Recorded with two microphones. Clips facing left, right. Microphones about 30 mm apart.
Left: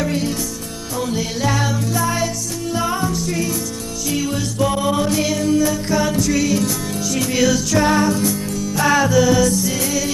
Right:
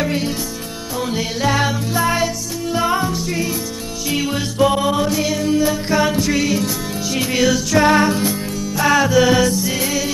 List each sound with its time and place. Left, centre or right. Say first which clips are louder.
0.0 s music: even; right
7.9 s music: right 2 dB; right
8.7 s music: right 1 dB; centre
9.2 s music: right 1 dB; right
9.5 s music: even; right